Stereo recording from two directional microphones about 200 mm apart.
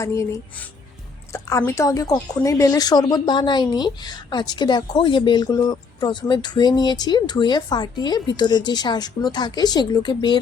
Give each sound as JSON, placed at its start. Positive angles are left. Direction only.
{"t": 0.0, "sound": "a woman's voice", "side_deg": 15}